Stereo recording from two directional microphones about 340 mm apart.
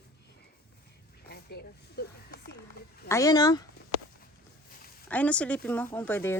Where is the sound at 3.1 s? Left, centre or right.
Centre.